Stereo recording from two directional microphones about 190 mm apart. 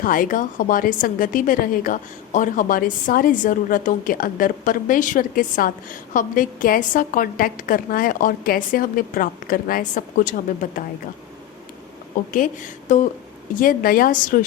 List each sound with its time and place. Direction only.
0.0 s a woman's voice: 45° left (ahead or behind)
12.1 s a woman's voice: 45° left (ahead or behind)